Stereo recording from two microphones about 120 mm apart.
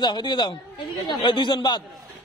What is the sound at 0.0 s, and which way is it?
A man's voice, 40° left (ahead or behind).